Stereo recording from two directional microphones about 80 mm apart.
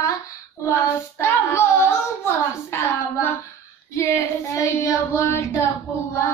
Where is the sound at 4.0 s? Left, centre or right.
Left.